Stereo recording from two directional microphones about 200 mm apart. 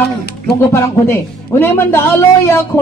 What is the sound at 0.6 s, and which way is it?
Speech, 15° left (ahead or behind).